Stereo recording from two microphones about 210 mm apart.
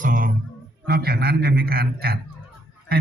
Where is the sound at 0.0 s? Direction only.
40° right (ahead or behind).